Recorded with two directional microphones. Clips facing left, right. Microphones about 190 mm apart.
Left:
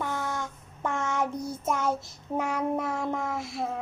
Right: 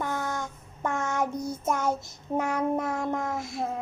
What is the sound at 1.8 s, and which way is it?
Child singing, 20° right (ahead or behind).